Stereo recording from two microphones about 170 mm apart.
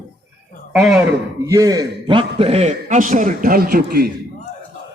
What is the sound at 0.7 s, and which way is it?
Speech, centre (ahead or behind).